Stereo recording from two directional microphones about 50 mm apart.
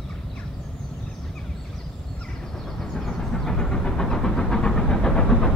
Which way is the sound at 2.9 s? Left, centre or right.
Centre.